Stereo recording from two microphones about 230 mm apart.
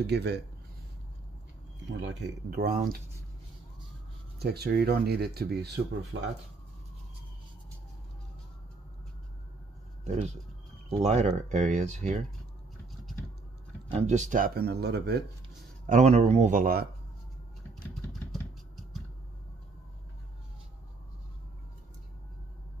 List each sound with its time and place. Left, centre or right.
0.0 s speech: right
1.9 s speech: right
4.4 s speech: right
10.0 s speech: right
13.8 s speech: right
15.9 s speech: right